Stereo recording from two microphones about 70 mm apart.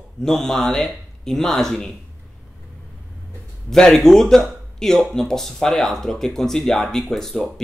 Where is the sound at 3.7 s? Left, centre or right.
Centre.